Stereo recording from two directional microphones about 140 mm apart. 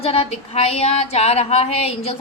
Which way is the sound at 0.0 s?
45° left (ahead or behind).